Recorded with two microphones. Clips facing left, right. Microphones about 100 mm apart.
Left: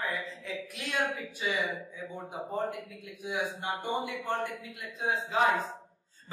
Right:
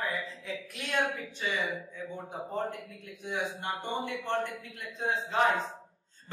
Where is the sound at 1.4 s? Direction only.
10° left (ahead or behind).